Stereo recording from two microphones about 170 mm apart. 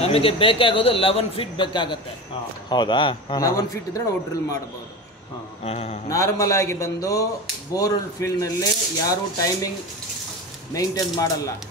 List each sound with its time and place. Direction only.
0.0 s speech: 35° left (ahead or behind)
5.6 s speech: 40° left (ahead or behind)
6.0 s speech: 20° left (ahead or behind)
10.7 s speech: 20° left (ahead or behind)